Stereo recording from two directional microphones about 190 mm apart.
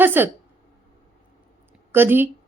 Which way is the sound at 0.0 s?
10° right (ahead or behind).